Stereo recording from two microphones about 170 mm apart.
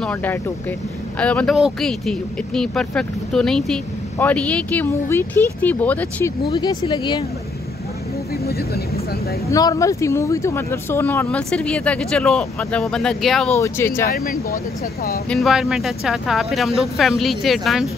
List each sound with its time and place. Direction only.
0.0 s speech: 10° left (ahead or behind)
6.5 s speech: 25° left (ahead or behind)
8.5 s speech: 65° left (ahead or behind)
9.5 s speech: 20° left (ahead or behind); by 13.5 s centre (ahead or behind)
13.6 s speech: 15° left (ahead or behind)
14.1 s speech: 60° left (ahead or behind)
15.2 s speech: centre (ahead or behind)